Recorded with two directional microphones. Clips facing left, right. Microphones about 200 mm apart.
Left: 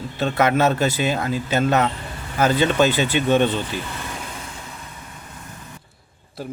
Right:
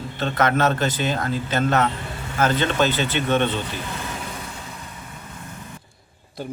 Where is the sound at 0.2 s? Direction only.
10° left (ahead or behind).